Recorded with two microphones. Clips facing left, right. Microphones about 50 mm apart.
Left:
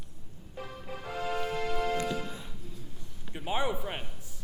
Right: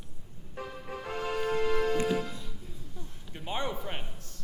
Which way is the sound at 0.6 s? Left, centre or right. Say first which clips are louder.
Right 2 dB; right.